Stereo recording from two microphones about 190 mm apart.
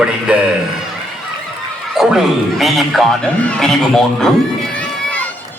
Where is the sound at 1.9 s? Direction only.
Centre (ahead or behind).